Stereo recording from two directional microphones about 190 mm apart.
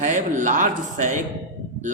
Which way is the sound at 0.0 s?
40° right (ahead or behind).